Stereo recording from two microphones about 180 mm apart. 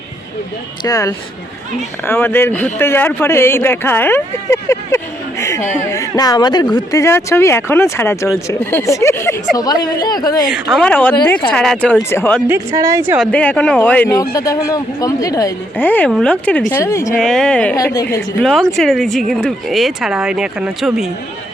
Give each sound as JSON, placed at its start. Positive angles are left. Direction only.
{"t": 0.9, "sound": "speech", "side_deg": 20}
{"t": 5.4, "sound": "a sound", "side_deg": 15}
{"t": 5.7, "sound": "speech", "side_deg": 15}
{"t": 10.5, "sound": "speech", "side_deg": 0}
{"t": 12.5, "sound": "a woman's voice", "side_deg": -20}
{"t": 13.1, "sound": "speech", "side_deg": 5}
{"t": 17.2, "sound": "speech", "side_deg": 5}
{"t": 17.7, "sound": "speech", "side_deg": 15}
{"t": 18.4, "sound": "speech", "side_deg": 0}